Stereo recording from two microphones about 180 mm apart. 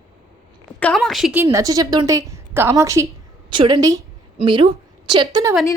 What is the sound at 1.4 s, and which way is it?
A woman's voice, 15° right (ahead or behind).